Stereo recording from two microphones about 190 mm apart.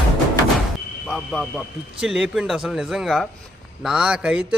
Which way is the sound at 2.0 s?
5° right (ahead or behind).